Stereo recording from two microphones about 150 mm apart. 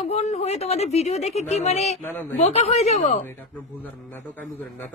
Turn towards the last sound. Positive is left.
turn(degrees=10)  # may be behind; listen again after turning